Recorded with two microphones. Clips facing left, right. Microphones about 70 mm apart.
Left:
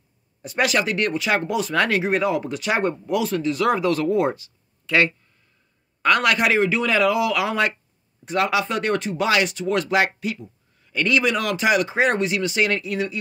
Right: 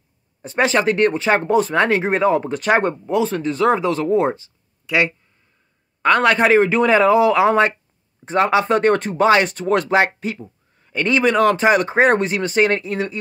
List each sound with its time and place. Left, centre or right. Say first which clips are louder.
0.4 s speech: right 4 dB; right
4.8 s speech: right 1 dB; centre
6.0 s speech: right 4 dB; right